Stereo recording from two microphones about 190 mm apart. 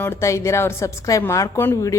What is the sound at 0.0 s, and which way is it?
A woman's voice, 15° left (ahead or behind).